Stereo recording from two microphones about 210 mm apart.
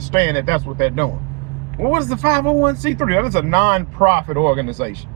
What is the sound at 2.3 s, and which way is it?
Speech, 15° left (ahead or behind).